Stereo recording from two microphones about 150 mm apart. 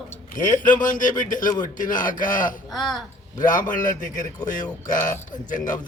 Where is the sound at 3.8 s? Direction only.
60° left (ahead or behind).